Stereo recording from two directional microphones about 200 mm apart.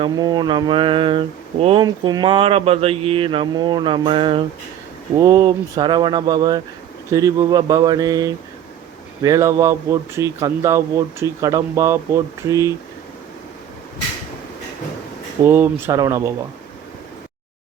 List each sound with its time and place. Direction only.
0.0 s speech: 20° right (ahead or behind)
15.4 s speech: 10° right (ahead or behind)